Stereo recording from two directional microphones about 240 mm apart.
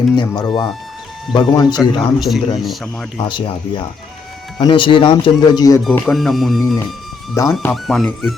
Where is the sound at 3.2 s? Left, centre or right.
Centre.